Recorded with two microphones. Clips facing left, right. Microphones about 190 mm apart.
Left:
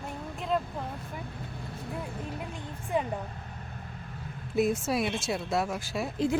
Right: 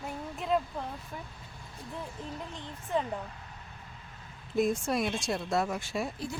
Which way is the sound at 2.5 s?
10° left (ahead or behind).